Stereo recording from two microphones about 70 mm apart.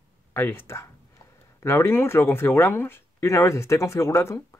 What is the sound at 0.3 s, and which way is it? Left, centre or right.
Speech, left.